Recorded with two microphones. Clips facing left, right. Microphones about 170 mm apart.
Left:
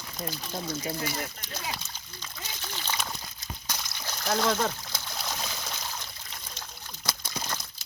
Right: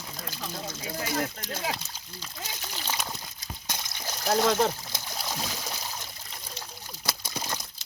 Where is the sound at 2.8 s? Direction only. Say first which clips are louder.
Even; 15° right (ahead or behind).